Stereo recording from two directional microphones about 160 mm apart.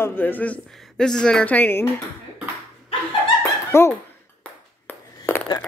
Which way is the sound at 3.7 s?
15° left (ahead or behind).